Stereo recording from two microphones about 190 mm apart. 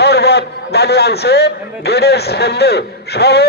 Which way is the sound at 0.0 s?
60° left (ahead or behind).